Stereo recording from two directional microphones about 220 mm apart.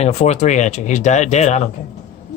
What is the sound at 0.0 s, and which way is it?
Speech, 30° left (ahead or behind).